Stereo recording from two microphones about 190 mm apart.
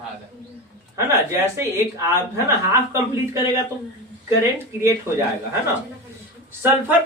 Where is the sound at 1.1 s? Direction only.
15° right (ahead or behind).